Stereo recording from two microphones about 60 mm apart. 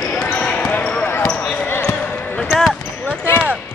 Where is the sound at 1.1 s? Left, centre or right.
Left.